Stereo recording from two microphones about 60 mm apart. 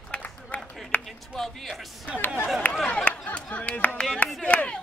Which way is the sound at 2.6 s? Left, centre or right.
Left.